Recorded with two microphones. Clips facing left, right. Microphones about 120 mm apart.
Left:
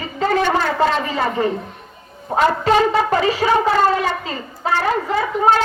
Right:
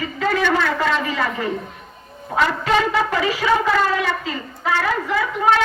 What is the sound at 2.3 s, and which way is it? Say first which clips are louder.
A woman's voice: left 3 dB; 35° left (ahead or behind).